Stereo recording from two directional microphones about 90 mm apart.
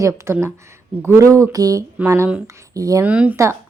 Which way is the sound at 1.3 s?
40° right (ahead or behind).